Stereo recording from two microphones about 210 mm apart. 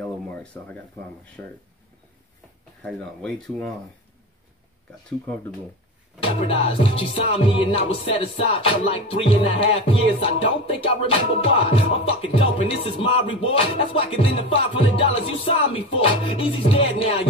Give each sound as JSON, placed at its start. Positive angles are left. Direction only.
{"t": 0.0, "sound": "a sound", "side_deg": 5}
{"t": 2.8, "sound": "speech", "side_deg": 5}
{"t": 6.1, "sound": "music", "side_deg": 25}